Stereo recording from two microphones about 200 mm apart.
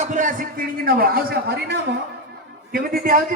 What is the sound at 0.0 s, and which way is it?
A man's voice, 40° right (ahead or behind).